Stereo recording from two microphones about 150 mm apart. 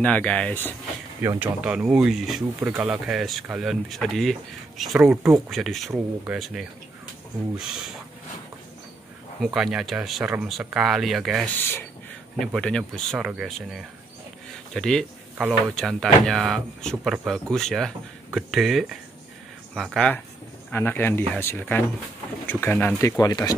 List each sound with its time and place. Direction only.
0.0 s speech: 10° left (ahead or behind)
1.2 s speech: 20° right (ahead or behind)
1.6 s speech: 5° right (ahead or behind)
9.4 s speech: 5° right (ahead or behind)
20.7 s speech: 15° left (ahead or behind)